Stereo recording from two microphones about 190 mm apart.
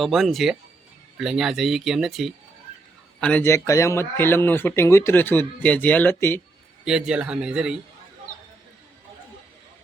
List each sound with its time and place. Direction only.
0.0 s speech: centre (ahead or behind)
6.8 s speech: 5° right (ahead or behind)